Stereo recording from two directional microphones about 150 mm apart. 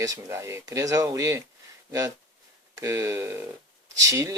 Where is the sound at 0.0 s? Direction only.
20° right (ahead or behind).